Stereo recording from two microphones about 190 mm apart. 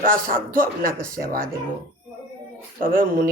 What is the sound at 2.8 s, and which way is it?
Speech, 50° right (ahead or behind).